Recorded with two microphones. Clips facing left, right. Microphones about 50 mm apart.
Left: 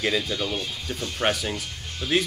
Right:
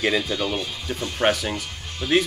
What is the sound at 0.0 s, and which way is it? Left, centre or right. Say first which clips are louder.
Speech: right 3 dB; centre.